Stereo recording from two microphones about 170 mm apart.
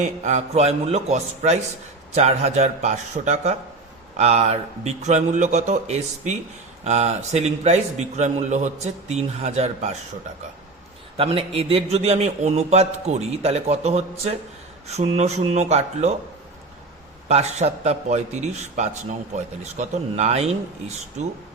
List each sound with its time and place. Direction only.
0.0 s a man's voice: 45° right (ahead or behind)
11.2 s a man's voice: 35° right (ahead or behind)
17.2 s a man's voice: 40° right (ahead or behind)